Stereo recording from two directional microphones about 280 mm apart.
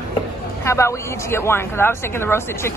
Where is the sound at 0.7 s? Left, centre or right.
Centre.